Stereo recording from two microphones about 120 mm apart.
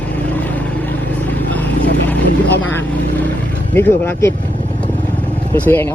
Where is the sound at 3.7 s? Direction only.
20° left (ahead or behind).